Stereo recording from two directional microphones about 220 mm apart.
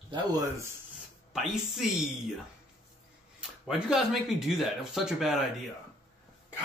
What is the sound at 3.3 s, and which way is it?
Speech, centre (ahead or behind).